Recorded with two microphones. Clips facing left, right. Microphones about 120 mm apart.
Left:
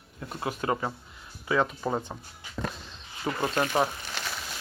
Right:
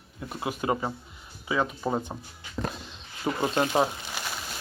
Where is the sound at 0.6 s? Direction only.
15° right (ahead or behind).